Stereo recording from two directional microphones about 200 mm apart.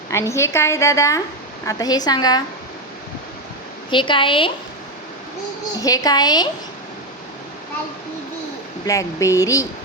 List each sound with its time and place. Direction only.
0.1 s a woman's voice: 15° left (ahead or behind)
3.8 s a woman's voice: 25° left (ahead or behind)
5.8 s a woman's voice: 20° left (ahead or behind)
8.9 s a woman's voice: 15° left (ahead or behind)